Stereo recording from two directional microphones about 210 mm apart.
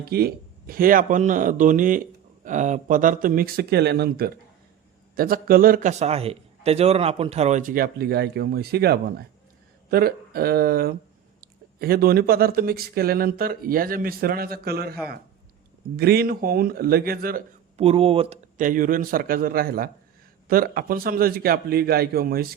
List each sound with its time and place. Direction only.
0.0 s a man's voice: 45° right (ahead or behind)
17.7 s speech: 30° right (ahead or behind)
18.5 s a man's voice: 40° right (ahead or behind)